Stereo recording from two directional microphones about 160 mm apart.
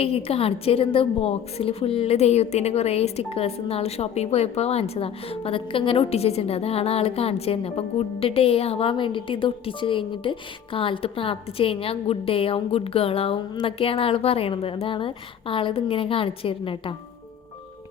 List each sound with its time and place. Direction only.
0.0 s a woman's voice: 40° left (ahead or behind)